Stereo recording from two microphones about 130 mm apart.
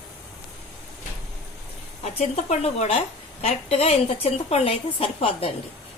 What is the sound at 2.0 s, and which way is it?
A woman's voice, 55° left (ahead or behind).